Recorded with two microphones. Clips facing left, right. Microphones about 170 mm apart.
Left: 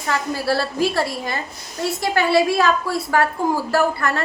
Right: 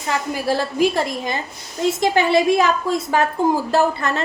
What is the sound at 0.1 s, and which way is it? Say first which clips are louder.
A woman's voice: even; 15° right (ahead or behind).